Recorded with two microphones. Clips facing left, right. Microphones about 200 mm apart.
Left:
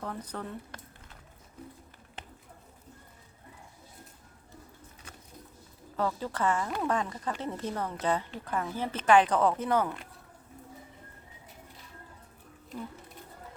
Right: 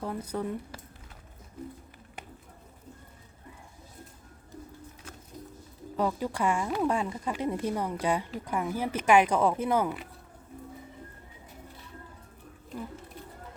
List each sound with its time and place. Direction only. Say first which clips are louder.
0.0 s speech: right 5 dB; 10° right (ahead or behind)
6.0 s speech: right 2 dB; 15° right (ahead or behind)